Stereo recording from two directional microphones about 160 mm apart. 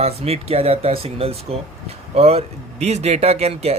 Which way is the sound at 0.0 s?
40° right (ahead or behind).